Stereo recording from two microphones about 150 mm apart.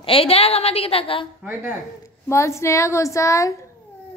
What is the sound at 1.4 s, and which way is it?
Speech, 10° right (ahead or behind).